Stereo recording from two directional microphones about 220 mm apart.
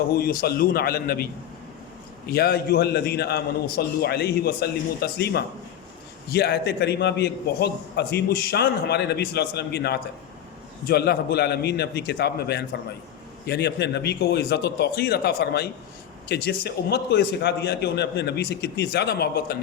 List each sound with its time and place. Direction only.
0.1 s a man's voice: 45° left (ahead or behind)